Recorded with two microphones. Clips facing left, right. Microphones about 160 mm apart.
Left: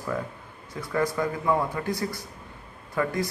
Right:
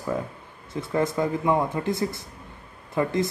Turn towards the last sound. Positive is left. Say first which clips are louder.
# right 3 dB
turn(degrees=-25)  # may be behind; listen again after turning